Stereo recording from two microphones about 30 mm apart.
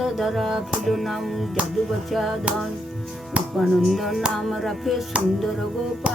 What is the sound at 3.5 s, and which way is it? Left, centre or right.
Music, centre.